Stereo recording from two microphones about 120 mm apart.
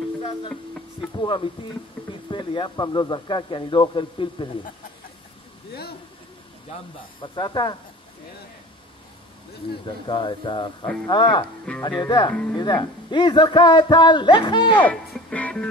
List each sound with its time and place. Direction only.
1.2 s a man's voice: 40° left (ahead or behind)
7.2 s a man's voice: 40° left (ahead or behind)
10.0 s a man's voice: 40° left (ahead or behind)
12.3 s speech: 10° left (ahead or behind)
12.5 s a man's voice: 40° left (ahead or behind)
14.7 s speech: 15° left (ahead or behind)
15.1 s music: 10° left (ahead or behind)